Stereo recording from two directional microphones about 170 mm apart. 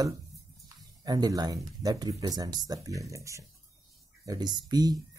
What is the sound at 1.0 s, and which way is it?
Speech, 20° right (ahead or behind).